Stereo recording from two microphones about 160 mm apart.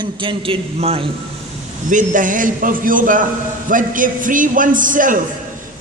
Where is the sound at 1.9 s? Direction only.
55° right (ahead or behind).